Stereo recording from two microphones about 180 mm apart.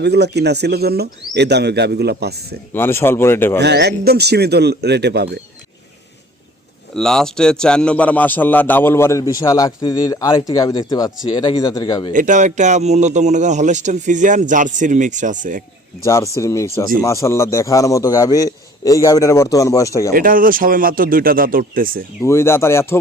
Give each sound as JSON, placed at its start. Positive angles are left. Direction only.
{"t": 0.0, "sound": "speech", "side_deg": -70}
{"t": 2.7, "sound": "a man's voice", "side_deg": 15}
{"t": 3.6, "sound": "a man's voice", "side_deg": -70}
{"t": 6.9, "sound": "a man's voice", "side_deg": 5}
{"t": 12.1, "sound": "a man's voice", "side_deg": -45}
{"t": 16.0, "sound": "a man's voice", "side_deg": 15}
{"t": 20.1, "sound": "a man's voice", "side_deg": -50}
{"t": 22.2, "sound": "a man's voice", "side_deg": 15}